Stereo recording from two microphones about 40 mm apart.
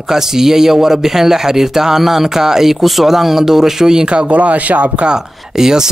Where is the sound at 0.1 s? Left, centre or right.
Centre.